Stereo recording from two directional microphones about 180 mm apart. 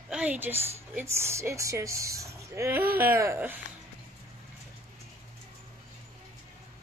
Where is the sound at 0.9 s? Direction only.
15° right (ahead or behind).